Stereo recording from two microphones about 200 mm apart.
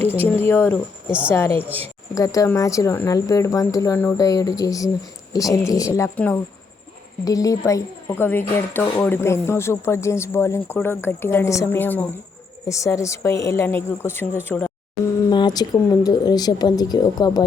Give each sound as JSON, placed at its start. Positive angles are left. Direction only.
{"t": 0.3, "sound": "a woman's voice", "side_deg": 10}
{"t": 1.0, "sound": "a woman's voice", "side_deg": -5}
{"t": 1.3, "sound": "a woman's voice", "side_deg": 10}
{"t": 15.3, "sound": "speech", "side_deg": 20}